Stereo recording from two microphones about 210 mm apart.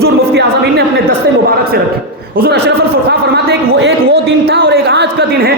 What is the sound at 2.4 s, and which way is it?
A man's voice, 50° right (ahead or behind).